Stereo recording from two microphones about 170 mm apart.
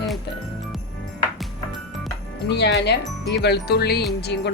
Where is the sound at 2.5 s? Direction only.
80° left.